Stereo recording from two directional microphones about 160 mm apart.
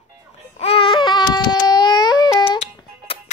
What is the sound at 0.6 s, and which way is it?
Baby cry, 35° left (ahead or behind).